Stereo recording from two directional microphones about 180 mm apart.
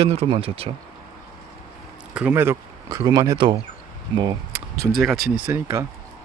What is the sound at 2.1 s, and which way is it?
Speech, 5° right (ahead or behind).